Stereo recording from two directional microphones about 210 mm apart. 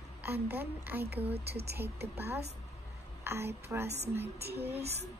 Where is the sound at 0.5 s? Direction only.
10° right (ahead or behind).